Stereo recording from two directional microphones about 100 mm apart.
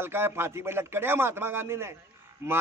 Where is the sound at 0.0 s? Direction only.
25° right (ahead or behind).